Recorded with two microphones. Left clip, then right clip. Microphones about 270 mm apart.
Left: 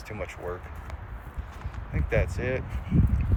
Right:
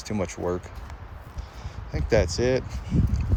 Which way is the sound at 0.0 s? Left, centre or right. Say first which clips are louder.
Right 6 dB; right.